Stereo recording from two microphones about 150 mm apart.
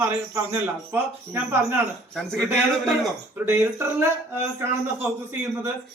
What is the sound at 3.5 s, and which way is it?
A man's voice, 15° right (ahead or behind).